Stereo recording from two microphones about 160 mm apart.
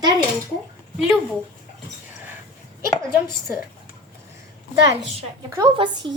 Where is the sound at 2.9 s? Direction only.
25° left (ahead or behind).